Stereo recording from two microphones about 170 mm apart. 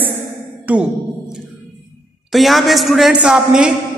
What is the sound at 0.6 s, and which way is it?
Music, 10° right (ahead or behind).